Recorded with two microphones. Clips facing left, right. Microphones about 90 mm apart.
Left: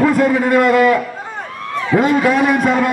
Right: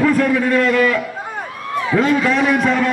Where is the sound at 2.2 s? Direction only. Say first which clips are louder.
Left 2 dB; 10° left (ahead or behind).